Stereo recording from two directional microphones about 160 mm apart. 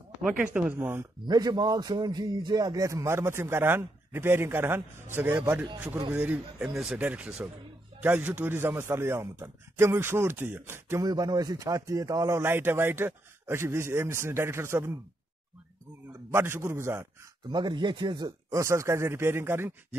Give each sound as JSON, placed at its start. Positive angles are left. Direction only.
{"t": 0.2, "sound": "speech", "side_deg": -5}
{"t": 1.2, "sound": "speech", "side_deg": -25}
{"t": 16.1, "sound": "a man's voice", "side_deg": -15}
{"t": 17.5, "sound": "speech", "side_deg": -30}